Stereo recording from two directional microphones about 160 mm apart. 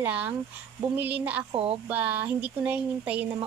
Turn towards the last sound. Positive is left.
turn(degrees=-10)  # may be behind; listen again after turning